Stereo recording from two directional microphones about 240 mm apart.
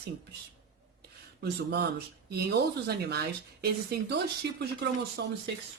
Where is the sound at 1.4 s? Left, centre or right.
Right.